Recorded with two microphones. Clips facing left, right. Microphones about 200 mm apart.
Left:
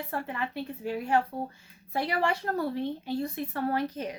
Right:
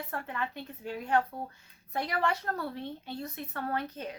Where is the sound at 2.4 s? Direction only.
30° left (ahead or behind).